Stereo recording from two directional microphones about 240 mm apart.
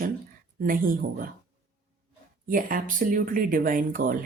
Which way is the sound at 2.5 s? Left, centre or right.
Right.